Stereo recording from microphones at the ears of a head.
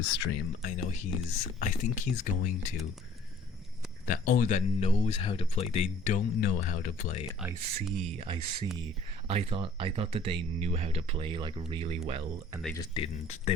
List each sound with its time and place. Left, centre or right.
0.0 s speech: left
4.0 s speech: left
7.6 s speech: right